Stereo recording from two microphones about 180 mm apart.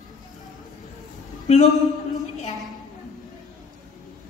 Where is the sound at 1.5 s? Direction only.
35° left (ahead or behind).